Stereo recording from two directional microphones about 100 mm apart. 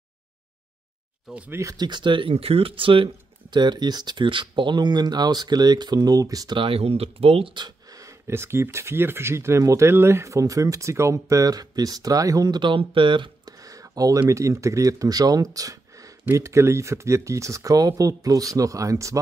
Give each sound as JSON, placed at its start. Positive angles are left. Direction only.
{"t": 1.5, "sound": "speech", "side_deg": -30}
{"t": 1.9, "sound": "speech", "side_deg": -50}
{"t": 6.5, "sound": "speech", "side_deg": -65}
{"t": 7.5, "sound": "speech", "side_deg": -40}
{"t": 13.6, "sound": "a sound", "side_deg": -35}
{"t": 14.3, "sound": "speech", "side_deg": -30}